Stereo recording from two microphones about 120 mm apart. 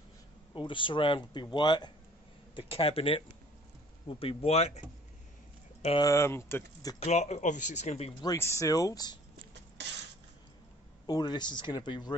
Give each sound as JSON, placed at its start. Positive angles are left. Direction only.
{"t": 0.6, "sound": "speech", "side_deg": 45}
{"t": 2.5, "sound": "speech", "side_deg": 50}
{"t": 5.9, "sound": "speech", "side_deg": 25}
{"t": 7.0, "sound": "speech", "side_deg": 70}
{"t": 8.1, "sound": "speech", "side_deg": 35}
{"t": 8.4, "sound": "speech", "side_deg": 25}
{"t": 11.1, "sound": "speech", "side_deg": 35}